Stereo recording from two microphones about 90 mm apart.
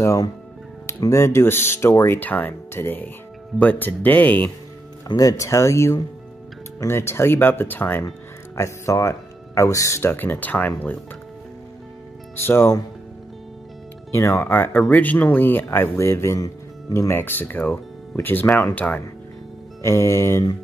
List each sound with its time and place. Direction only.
0.0 s speech: 40° left (ahead or behind); by 4.5 s 20° left (ahead or behind)
5.0 s speech: 40° left (ahead or behind); by 8.0 s 20° left (ahead or behind)
8.5 s speech: 35° left (ahead or behind); by 10.7 s 20° left (ahead or behind)
12.4 s speech: 30° left (ahead or behind)
14.1 s speech: 30° left (ahead or behind)
17.1 s speech: 25° left (ahead or behind)
19.8 s speech: 30° left (ahead or behind)